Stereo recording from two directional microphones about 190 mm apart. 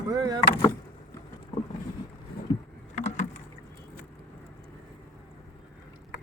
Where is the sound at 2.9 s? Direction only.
35° left (ahead or behind).